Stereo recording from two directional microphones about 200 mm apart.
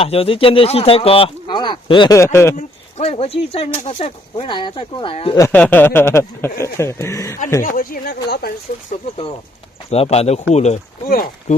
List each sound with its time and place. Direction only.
0.0 s speech: 30° left (ahead or behind)
2.6 s speech: 30° left (ahead or behind)
5.4 s speech: 10° left (ahead or behind)
7.6 s speech: 45° left (ahead or behind)
9.9 s speech: 30° left (ahead or behind); by 11.5 s 45° left (ahead or behind)